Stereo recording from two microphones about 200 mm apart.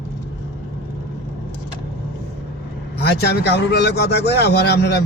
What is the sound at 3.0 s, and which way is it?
A man's voice, 55° left (ahead or behind).